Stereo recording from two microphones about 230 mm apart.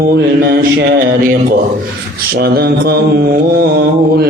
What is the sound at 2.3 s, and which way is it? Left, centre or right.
Mantra, right.